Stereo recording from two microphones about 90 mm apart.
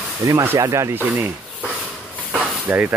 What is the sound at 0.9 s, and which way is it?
Speech, 20° right (ahead or behind).